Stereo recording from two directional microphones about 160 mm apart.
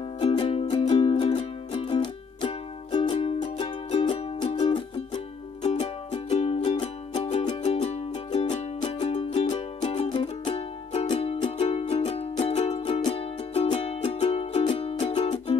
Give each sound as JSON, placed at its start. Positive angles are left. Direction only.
{"t": 0.2, "sound": "music", "side_deg": 35}
{"t": 5.6, "sound": "music", "side_deg": 45}
{"t": 9.8, "sound": "music", "side_deg": 30}